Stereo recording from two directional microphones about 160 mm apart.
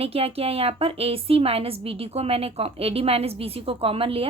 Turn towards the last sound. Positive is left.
turn(degrees=-35)  # may be behind; listen again after turning